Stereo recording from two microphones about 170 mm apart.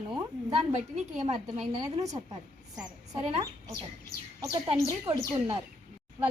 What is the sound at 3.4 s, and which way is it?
Speech, 20° right (ahead or behind).